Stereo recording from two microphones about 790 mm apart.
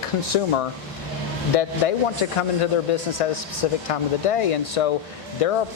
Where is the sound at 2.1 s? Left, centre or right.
Left.